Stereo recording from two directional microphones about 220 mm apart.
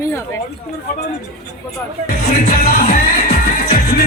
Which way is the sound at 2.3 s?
35° left (ahead or behind).